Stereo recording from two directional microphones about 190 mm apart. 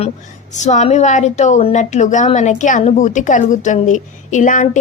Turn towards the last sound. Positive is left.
turn(degrees=45)  # may be behind; listen again after turning